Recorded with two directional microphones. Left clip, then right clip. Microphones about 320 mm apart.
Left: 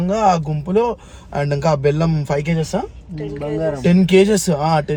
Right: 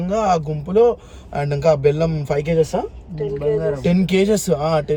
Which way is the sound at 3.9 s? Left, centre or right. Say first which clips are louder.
Left 6 dB; centre.